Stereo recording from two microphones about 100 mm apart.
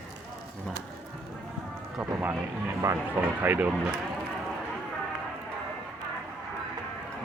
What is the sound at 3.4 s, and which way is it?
Speech, 20° right (ahead or behind).